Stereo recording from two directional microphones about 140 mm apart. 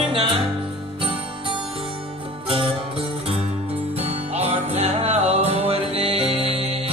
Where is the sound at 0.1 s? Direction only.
35° right (ahead or behind).